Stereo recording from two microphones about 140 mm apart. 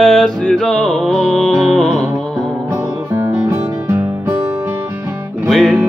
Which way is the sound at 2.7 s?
15° right (ahead or behind).